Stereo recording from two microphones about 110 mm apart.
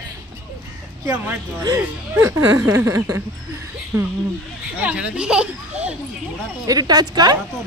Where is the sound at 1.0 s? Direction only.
20° right (ahead or behind).